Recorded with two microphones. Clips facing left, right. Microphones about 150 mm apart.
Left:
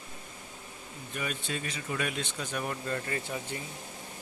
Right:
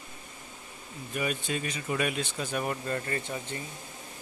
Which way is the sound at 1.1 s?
10° right (ahead or behind).